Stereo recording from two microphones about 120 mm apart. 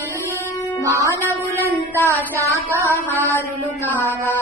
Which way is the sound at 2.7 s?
20° left (ahead or behind).